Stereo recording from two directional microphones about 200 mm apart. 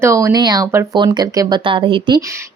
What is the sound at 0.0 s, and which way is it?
Speech, 15° right (ahead or behind).